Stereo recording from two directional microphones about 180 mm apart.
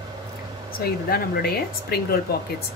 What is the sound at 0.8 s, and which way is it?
Speech, 55° left (ahead or behind).